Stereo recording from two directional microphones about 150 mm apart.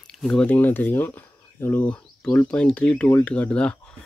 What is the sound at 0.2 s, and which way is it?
Speech, 5° left (ahead or behind).